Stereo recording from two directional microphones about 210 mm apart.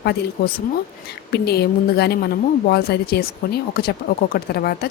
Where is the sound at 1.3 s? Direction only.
50° left (ahead or behind).